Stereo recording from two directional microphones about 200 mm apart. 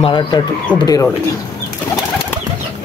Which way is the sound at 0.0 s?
20° left (ahead or behind).